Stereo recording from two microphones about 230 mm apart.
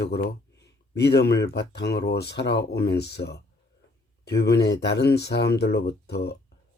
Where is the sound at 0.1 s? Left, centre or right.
Left.